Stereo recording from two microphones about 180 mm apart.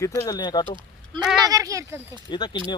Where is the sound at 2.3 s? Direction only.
25° left (ahead or behind).